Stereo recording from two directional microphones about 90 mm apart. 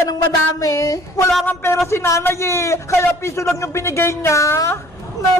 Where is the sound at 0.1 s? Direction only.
40° left (ahead or behind).